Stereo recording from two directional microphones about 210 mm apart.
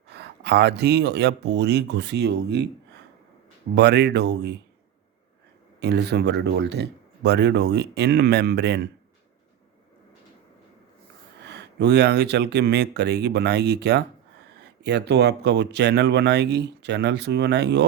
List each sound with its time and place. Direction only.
0.1 s speech: 50° right (ahead or behind)
3.8 s speech: 55° right (ahead or behind)
5.8 s speech: 55° right (ahead or behind)
11.4 s speech: 55° right (ahead or behind)